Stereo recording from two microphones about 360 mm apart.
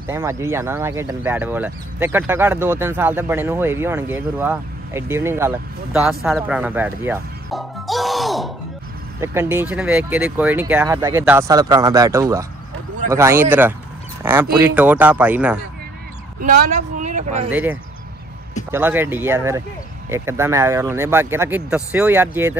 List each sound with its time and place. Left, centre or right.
0.0 s speech: centre
16.4 s a woman's voice: right
17.5 s speech: centre